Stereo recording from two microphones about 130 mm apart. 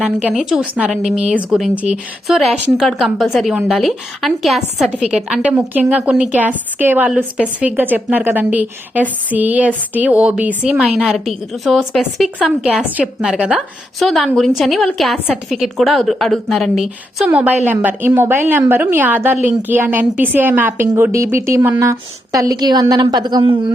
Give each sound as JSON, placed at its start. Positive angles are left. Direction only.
{"t": 0.3, "sound": "a woman's voice", "side_deg": -10}